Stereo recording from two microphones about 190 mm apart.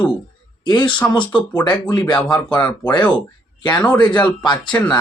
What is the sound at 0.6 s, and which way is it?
Speech, 25° left (ahead or behind).